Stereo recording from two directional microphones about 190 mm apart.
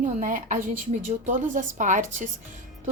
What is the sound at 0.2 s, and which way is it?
A woman's voice, 45° right (ahead or behind).